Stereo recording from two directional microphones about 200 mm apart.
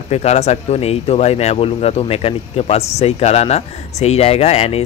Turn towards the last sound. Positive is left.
turn(degrees=30)  # may be behind; listen again after turning